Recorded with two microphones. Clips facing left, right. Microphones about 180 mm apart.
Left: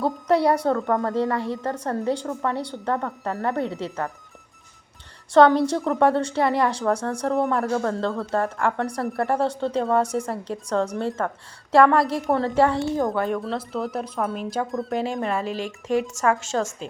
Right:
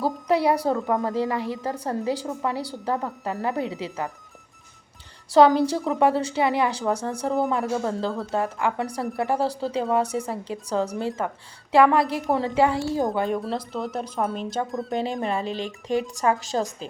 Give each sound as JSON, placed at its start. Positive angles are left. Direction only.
{"t": 0.0, "sound": "a woman's voice", "side_deg": 0}
{"t": 5.3, "sound": "a woman's voice", "side_deg": -5}
{"t": 15.2, "sound": "speech", "side_deg": -30}
{"t": 15.5, "sound": "a woman's voice", "side_deg": 0}
{"t": 16.2, "sound": "a woman's voice", "side_deg": -35}